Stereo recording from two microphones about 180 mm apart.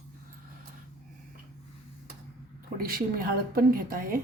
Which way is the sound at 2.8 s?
55° right (ahead or behind).